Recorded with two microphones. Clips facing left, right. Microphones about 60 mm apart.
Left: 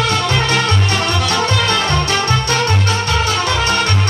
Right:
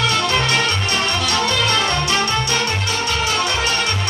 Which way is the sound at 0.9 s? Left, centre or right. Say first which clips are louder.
Left 3 dB; left.